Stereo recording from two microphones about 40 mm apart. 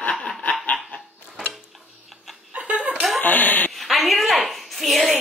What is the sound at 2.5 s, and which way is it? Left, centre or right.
Chuckle, right.